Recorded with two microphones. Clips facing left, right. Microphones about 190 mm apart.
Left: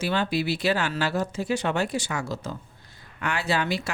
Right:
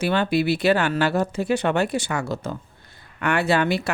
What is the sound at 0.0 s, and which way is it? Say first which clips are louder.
Speech: right 5 dB; 60° right (ahead or behind).